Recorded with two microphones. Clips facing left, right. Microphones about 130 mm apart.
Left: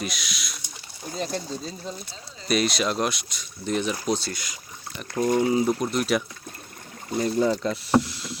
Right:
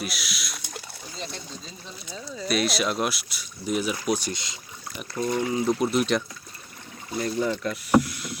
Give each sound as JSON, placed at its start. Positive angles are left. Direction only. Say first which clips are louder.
{"t": 0.0, "sound": "rowboat", "louder": "left 1 dB", "side_deg": -5}
{"t": 1.1, "sound": "speech", "louder": "left 8 dB", "side_deg": 45}
{"t": 2.5, "sound": "speech", "louder": "left 2 dB", "side_deg": 0}
{"t": 4.1, "sound": "speech", "louder": "even", "side_deg": -20}
{"t": 5.1, "sound": "speech", "louder": "left 4 dB", "side_deg": 45}
{"t": 5.8, "sound": "speech", "louder": "right 1 dB", "side_deg": -5}
{"t": 7.2, "sound": "speech", "louder": "left 3 dB", "side_deg": 30}